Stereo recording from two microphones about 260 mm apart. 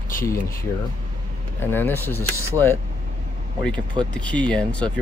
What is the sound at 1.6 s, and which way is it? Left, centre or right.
Speech, centre.